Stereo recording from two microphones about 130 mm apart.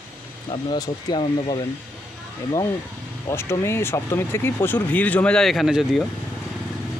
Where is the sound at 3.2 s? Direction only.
20° left (ahead or behind); by 6.1 s centre (ahead or behind).